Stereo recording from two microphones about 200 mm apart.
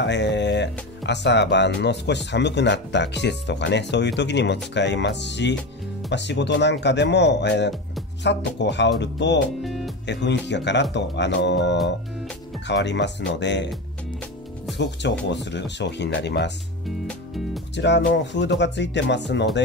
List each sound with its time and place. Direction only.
0.0 s speech: 60° left (ahead or behind)
9.6 s music: centre (ahead or behind)
10.0 s speech: 60° left (ahead or behind)
14.8 s speech: 60° left (ahead or behind)
17.7 s speech: 60° left (ahead or behind)